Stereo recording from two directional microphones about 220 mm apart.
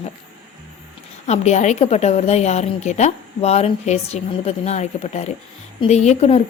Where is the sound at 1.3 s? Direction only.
30° left (ahead or behind).